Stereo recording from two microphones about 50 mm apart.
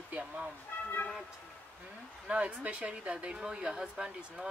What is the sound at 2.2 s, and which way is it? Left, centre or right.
Speech, right.